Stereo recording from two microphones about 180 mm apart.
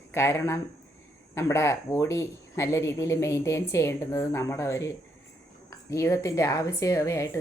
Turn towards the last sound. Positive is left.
turn(degrees=15)  # may be behind; listen again after turning